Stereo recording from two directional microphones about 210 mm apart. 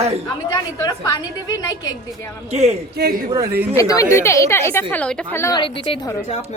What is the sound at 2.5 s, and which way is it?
Speech, 30° right (ahead or behind).